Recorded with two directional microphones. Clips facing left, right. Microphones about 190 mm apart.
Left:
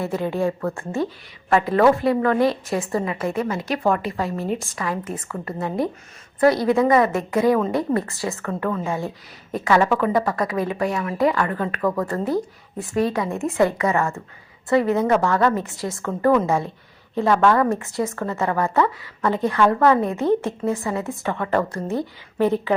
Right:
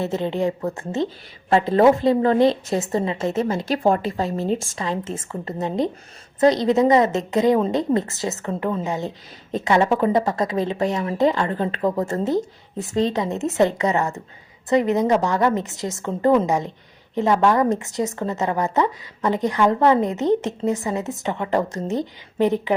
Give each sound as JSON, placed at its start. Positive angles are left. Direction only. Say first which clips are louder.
{"t": 0.0, "sound": "a woman's voice", "louder": "even", "side_deg": -20}